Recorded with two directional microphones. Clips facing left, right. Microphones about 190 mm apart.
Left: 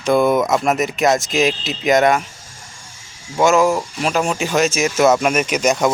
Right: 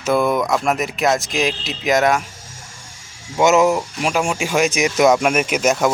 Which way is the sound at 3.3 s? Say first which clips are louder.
Even; 20° right (ahead or behind).